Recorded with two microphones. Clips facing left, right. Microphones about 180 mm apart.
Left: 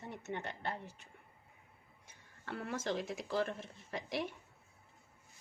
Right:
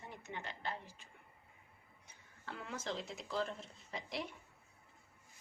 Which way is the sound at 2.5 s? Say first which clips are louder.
Left 5 dB; 60° left (ahead or behind).